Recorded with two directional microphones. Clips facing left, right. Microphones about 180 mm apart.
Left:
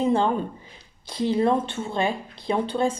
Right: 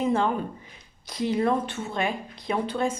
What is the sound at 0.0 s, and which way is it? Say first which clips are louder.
A woman's voice: left 3 dB; 30° left (ahead or behind).